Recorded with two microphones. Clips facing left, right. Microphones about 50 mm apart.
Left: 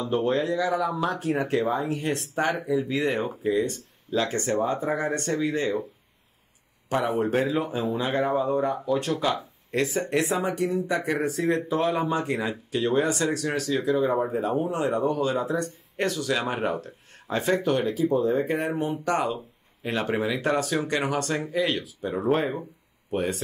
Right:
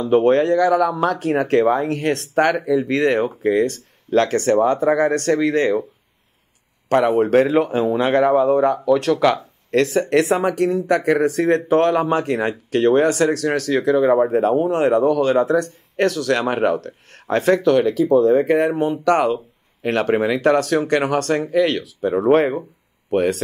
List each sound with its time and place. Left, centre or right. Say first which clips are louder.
0.0 s speech: right 10 dB; right
6.9 s speech: right 9 dB; right